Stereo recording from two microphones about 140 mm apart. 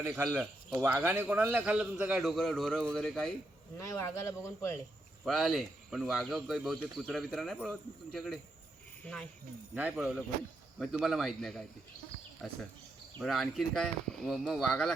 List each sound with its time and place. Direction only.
0.8 s speech: 15° right (ahead or behind); by 3.3 s 5° left (ahead or behind)
3.8 s speech: 20° left (ahead or behind)
5.2 s speech: centre (ahead or behind)
9.7 s speech: 10° right (ahead or behind)
13.1 s speech: centre (ahead or behind)